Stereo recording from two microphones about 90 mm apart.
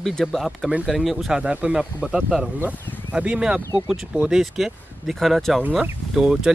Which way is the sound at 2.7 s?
20° left (ahead or behind).